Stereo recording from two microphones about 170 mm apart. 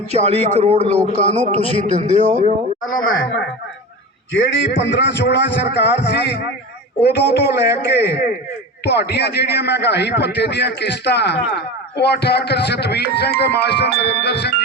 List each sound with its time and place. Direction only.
0.2 s speech: 40° right (ahead or behind)
4.3 s a man's voice: 90° left; by 14.5 s 75° left (ahead or behind)